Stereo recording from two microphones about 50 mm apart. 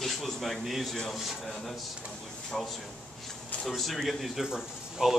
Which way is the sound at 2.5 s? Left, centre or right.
Centre.